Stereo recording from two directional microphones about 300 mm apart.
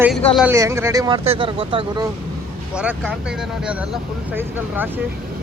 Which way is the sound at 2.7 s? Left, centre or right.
Centre.